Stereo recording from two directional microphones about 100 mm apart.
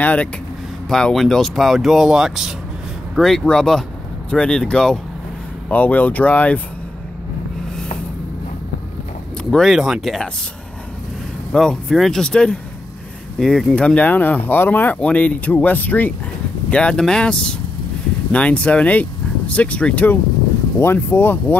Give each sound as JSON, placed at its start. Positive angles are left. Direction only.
{"t": 0.0, "sound": "speech", "side_deg": 15}
{"t": 5.7, "sound": "speech", "side_deg": 15}
{"t": 9.4, "sound": "speech", "side_deg": 5}
{"t": 11.5, "sound": "speech", "side_deg": 5}